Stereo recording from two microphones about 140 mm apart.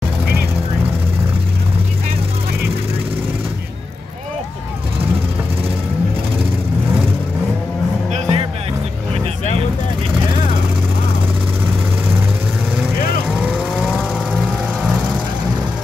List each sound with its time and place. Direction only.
8.1 s music: 45° right (ahead or behind)
13.4 s vehicle: 10° right (ahead or behind)